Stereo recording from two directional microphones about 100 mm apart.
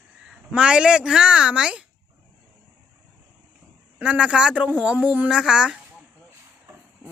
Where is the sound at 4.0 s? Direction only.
10° right (ahead or behind).